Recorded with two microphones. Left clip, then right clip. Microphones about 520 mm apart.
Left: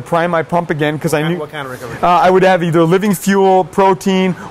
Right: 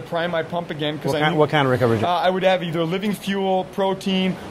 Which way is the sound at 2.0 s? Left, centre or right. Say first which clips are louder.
Left 13 dB; left.